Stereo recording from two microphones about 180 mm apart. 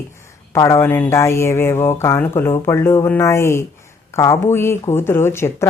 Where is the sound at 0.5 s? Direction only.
15° left (ahead or behind).